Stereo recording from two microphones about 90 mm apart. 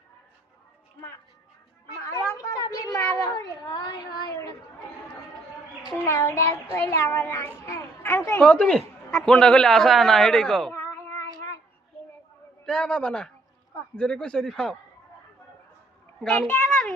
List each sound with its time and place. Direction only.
2.0 s a sound: 40° left (ahead or behind)
3.3 s a sound: 55° left (ahead or behind)
6.1 s child singing: 35° left (ahead or behind)
8.4 s a man's voice: 10° left (ahead or behind)
12.6 s speech: 10° left (ahead or behind)
16.5 s a child's voice: 10° left (ahead or behind)